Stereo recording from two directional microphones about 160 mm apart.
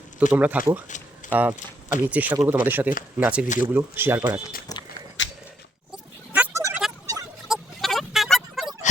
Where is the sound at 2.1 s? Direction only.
10° right (ahead or behind).